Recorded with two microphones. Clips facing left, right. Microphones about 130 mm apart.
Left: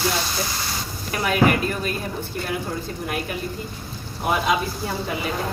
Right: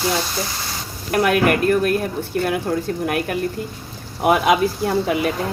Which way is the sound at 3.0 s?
60° right (ahead or behind).